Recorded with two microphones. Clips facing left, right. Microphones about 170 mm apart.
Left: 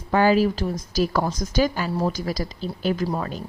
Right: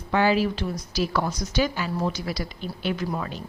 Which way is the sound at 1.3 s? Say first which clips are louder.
Left 2 dB; 90° left.